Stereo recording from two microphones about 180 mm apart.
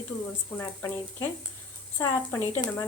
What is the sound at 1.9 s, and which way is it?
Speech, 10° left (ahead or behind).